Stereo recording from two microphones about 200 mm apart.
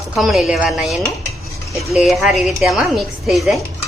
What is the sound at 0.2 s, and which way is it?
A woman's voice, centre (ahead or behind).